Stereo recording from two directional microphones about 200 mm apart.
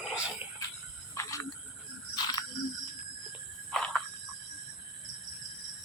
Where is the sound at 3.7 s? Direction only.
Centre (ahead or behind).